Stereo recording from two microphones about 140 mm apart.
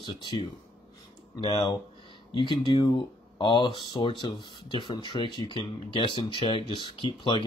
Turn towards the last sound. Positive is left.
turn(degrees=35)  # may be behind; listen again after turning